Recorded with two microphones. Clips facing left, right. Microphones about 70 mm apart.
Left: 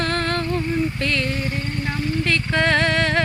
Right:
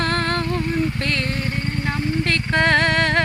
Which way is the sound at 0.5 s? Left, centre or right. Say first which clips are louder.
Even; right.